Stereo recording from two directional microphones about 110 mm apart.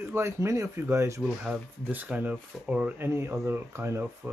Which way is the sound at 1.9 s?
15° right (ahead or behind).